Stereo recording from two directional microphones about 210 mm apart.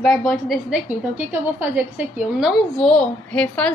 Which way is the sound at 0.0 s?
5° left (ahead or behind).